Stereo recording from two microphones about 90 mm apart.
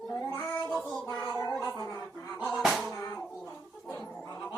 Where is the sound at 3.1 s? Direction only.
30° left (ahead or behind).